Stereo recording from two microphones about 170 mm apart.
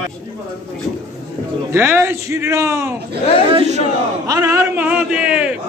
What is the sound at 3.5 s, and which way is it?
Speech, 40° right (ahead or behind).